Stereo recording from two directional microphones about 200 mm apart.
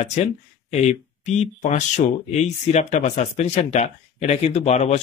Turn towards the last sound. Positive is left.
turn(degrees=35)  # may be behind; listen again after turning